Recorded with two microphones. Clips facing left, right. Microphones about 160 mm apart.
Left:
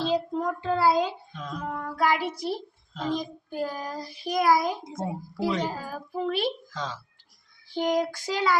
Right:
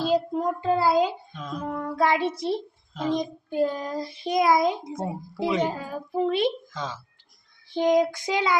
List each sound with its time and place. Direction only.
0.0 s a child's voice: 10° right (ahead or behind)
1.3 s a sound: centre (ahead or behind)
1.7 s a child's voice: 25° right (ahead or behind)
4.9 s a child's voice: 5° right (ahead or behind)
5.6 s a child's voice: 25° right (ahead or behind)
6.7 s speech: 5° right (ahead or behind)
7.7 s a child's voice: 20° right (ahead or behind)